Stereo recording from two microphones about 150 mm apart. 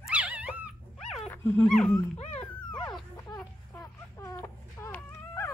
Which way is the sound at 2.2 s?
50° left (ahead or behind).